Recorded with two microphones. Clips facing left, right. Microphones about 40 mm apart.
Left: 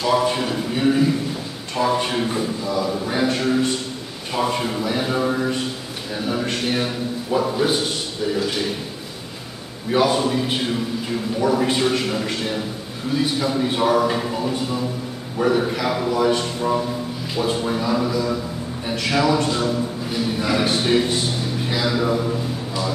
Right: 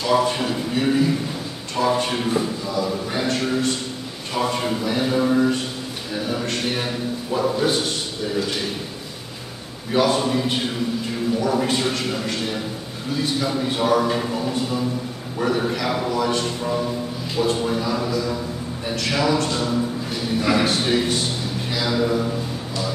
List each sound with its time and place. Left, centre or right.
0.0 s a man's voice: centre
9.9 s a man's voice: centre